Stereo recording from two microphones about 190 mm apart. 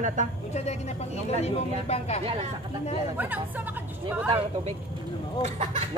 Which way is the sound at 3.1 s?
10° right (ahead or behind).